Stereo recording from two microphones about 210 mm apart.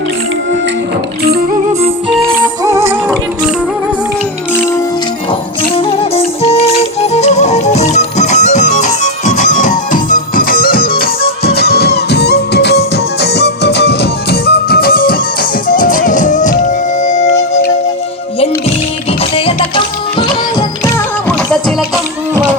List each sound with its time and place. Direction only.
2.4 s music: 15° right (ahead or behind)
4.5 s music: 10° left (ahead or behind)
5.7 s music: 25° left (ahead or behind)
19.2 s music: 25° left (ahead or behind)
21.2 s music: 5° left (ahead or behind)